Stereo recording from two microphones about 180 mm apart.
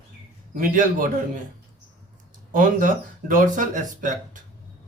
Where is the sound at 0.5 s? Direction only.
50° right (ahead or behind).